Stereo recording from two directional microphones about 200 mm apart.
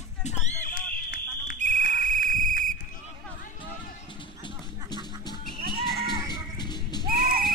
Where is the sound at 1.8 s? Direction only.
45° left (ahead or behind).